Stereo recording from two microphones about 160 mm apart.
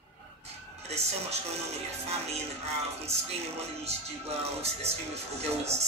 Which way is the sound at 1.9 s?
40° right (ahead or behind).